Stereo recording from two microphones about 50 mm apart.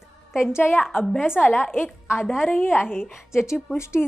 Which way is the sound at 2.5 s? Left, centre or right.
Left.